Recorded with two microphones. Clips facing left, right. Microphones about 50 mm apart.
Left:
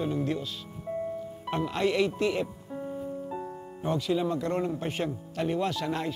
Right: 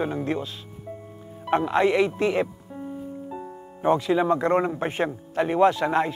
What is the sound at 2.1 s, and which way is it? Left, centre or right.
Speech, right.